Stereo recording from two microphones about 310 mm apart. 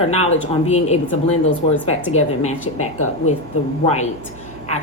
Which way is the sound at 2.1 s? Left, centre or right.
Left.